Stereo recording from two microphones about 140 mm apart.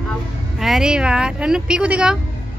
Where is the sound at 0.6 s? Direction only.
5° right (ahead or behind).